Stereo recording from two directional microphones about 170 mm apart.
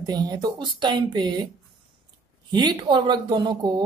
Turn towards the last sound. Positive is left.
turn(degrees=-25)  # may be behind; listen again after turning